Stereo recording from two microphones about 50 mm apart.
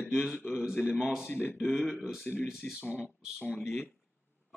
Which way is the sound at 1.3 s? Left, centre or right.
Left.